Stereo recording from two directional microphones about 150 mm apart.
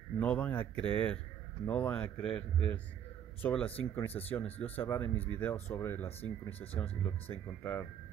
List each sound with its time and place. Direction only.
0.2 s speech: 10° left (ahead or behind)